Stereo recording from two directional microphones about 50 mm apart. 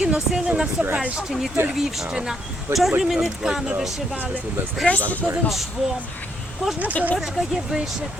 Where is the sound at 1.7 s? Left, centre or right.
Centre.